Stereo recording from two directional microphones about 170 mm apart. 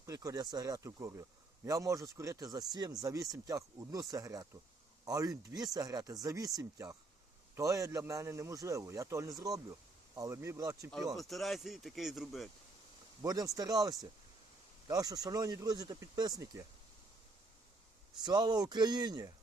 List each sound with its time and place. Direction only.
0.0 s a man's voice: 20° right (ahead or behind)
11.2 s speech: centre (ahead or behind)
13.2 s a man's voice: 20° right (ahead or behind)
18.2 s a man's voice: 25° right (ahead or behind)